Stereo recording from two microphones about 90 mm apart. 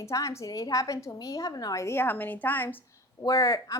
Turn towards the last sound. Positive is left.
turn(degrees=35)  # may be behind; listen again after turning